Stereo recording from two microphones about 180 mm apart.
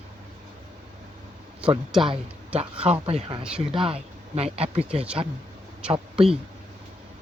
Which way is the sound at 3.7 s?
30° right (ahead or behind).